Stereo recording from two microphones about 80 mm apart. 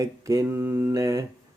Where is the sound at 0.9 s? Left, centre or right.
Right.